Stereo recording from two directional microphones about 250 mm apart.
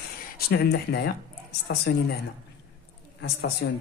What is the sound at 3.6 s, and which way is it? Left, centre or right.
Speech, left.